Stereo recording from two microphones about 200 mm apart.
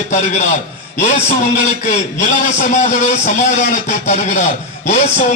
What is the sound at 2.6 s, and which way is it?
A man's voice, 35° left (ahead or behind).